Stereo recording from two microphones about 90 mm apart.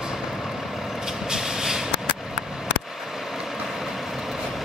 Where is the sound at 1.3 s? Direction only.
5° right (ahead or behind).